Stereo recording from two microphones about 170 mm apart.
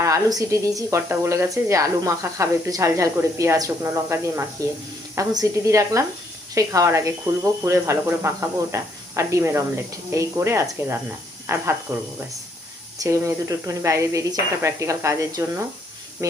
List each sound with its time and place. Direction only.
0.0 s a woman's voice: 20° right (ahead or behind)